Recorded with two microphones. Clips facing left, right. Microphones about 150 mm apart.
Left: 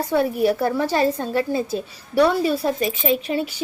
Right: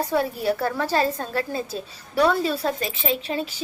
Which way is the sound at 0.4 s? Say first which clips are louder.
Left 4 dB; 15° left (ahead or behind).